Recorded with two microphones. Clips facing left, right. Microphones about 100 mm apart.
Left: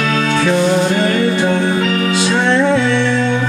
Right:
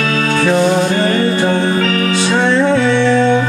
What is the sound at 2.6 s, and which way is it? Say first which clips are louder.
Music: right 2 dB; 35° right (ahead or behind).